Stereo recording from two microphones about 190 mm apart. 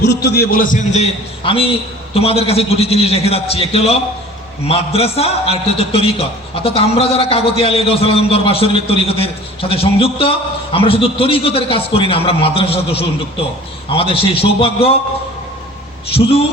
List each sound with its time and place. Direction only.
0.0 s a man's voice: 65° left (ahead or behind); by 14.9 s 30° left (ahead or behind)
16.1 s a man's voice: 30° left (ahead or behind)